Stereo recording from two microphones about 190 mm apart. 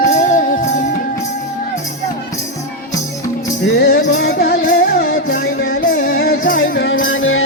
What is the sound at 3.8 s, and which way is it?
Music, 55° left (ahead or behind).